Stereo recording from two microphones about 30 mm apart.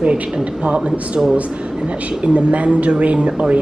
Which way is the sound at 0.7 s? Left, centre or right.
Right.